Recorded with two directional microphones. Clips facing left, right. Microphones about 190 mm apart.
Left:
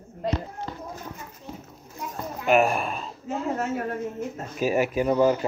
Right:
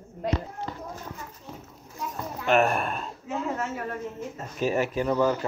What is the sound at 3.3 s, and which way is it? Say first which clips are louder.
Speech: left 3 dB; 40° left (ahead or behind).